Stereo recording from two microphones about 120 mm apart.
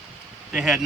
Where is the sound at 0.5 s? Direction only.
5° right (ahead or behind).